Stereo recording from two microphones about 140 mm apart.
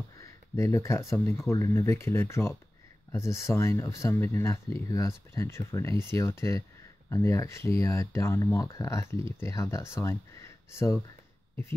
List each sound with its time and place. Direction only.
0.2 s speech: 20° left (ahead or behind)